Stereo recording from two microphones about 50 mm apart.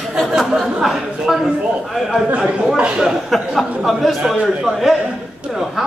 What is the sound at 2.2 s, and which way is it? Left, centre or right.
Speech, right.